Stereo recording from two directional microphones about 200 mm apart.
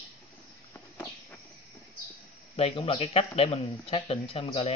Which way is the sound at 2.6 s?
30° left (ahead or behind).